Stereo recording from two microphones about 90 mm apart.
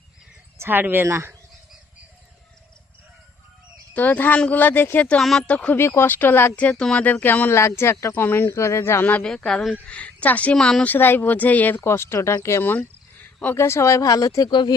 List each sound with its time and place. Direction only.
0.6 s speech: 20° right (ahead or behind)
3.9 s speech: 20° left (ahead or behind)
5.0 s a woman's voice: 5° left (ahead or behind)
5.7 s speech: 30° left (ahead or behind)
9.2 s a woman's voice: 5° left (ahead or behind)
10.9 s speech: 25° left (ahead or behind)
11.8 s speech: 30° left (ahead or behind)
14.5 s speech: 60° left (ahead or behind)